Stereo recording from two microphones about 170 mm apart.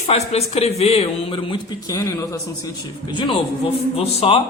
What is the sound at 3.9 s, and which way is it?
Speech, 35° left (ahead or behind).